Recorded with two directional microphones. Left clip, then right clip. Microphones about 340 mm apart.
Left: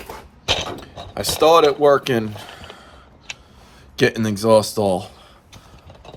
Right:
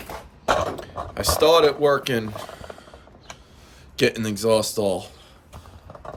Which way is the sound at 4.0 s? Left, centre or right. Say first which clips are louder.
Left 3 dB; centre.